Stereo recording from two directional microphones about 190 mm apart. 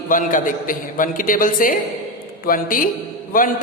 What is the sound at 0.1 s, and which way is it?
A man's voice, 45° left (ahead or behind).